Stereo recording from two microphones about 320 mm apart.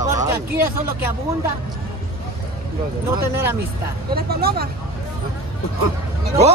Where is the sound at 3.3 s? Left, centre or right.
Centre.